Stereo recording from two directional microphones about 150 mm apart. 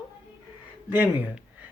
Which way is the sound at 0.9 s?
10° right (ahead or behind).